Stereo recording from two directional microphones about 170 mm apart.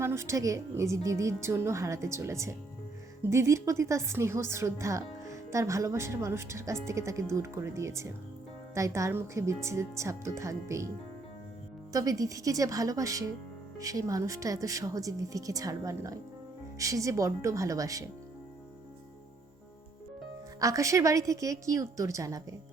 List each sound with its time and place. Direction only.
0.0 s a woman's voice: 15° right (ahead or behind)
11.9 s speech: 20° right (ahead or behind)
20.6 s speech: 20° right (ahead or behind)